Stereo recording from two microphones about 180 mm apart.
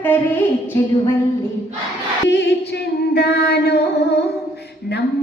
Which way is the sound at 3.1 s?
65° left (ahead or behind).